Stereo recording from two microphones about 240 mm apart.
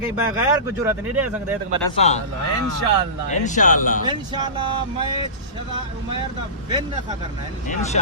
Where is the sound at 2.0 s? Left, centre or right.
Left.